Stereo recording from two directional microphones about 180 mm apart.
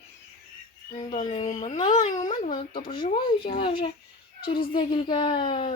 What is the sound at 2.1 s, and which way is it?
Speech, 20° left (ahead or behind).